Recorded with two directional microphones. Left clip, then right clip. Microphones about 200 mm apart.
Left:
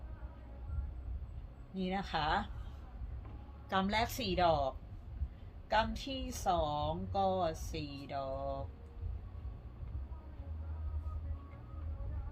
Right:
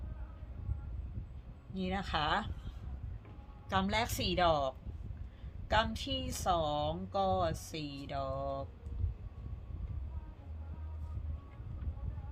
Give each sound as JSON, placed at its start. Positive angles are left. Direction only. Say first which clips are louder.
{"t": 1.7, "sound": "speech", "louder": "right 1 dB", "side_deg": -35}
{"t": 3.7, "sound": "speech", "louder": "even", "side_deg": -20}